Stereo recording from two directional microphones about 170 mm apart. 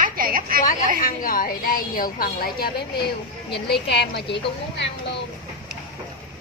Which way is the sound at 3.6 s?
75° left (ahead or behind).